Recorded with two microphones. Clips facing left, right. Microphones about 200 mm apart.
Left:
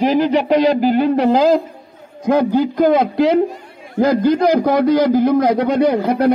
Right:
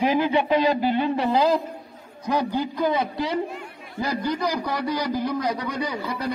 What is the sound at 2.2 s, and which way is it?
Speech, 50° left (ahead or behind).